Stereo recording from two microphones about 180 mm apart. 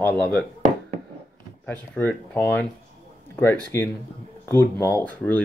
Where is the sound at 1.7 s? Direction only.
10° left (ahead or behind).